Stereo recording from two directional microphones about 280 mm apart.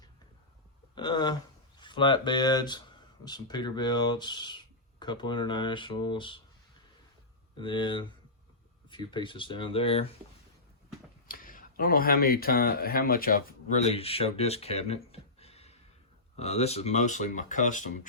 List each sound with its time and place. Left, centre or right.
0.9 s speech: centre
7.5 s speech: centre
11.3 s speech: left